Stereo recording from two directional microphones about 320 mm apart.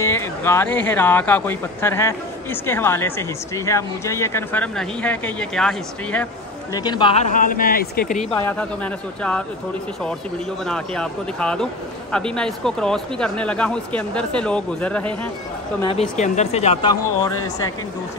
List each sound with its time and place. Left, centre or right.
0.0 s speech: centre
6.7 s speech: centre
10.7 s speech: centre
15.8 s speech: centre